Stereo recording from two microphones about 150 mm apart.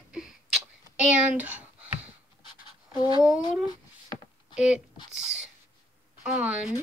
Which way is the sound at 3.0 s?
25° left (ahead or behind).